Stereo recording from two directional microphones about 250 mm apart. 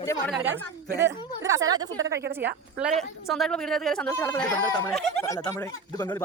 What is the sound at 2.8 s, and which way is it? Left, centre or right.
Speech, centre.